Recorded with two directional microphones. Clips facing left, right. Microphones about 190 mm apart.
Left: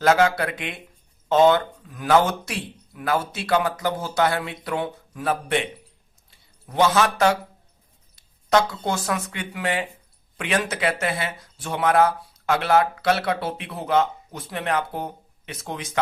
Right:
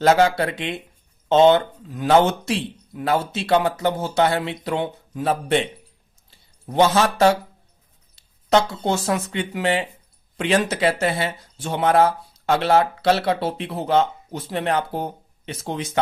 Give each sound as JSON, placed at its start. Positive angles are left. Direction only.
{"t": 0.0, "sound": "speech", "side_deg": -30}